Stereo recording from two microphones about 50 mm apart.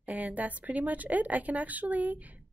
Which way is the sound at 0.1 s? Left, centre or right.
Right.